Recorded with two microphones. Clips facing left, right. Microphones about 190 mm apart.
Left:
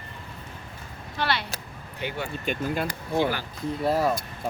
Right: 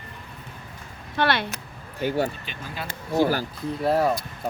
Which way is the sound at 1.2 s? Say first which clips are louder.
Right 5 dB; 55° right (ahead or behind).